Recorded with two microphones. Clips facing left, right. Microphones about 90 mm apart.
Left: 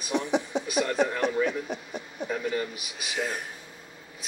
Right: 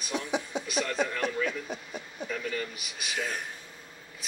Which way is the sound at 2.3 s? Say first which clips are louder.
Left 5 dB; 20° left (ahead or behind).